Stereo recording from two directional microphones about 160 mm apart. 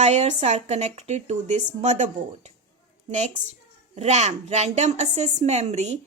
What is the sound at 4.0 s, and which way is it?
A woman's voice, 45° right (ahead or behind).